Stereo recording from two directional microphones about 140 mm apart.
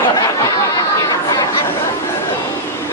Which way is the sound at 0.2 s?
25° left (ahead or behind).